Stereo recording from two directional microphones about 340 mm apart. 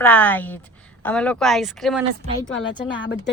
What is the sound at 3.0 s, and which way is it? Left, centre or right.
Speech, left.